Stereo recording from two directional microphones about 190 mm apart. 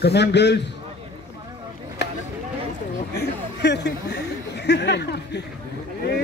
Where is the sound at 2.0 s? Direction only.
60° left (ahead or behind).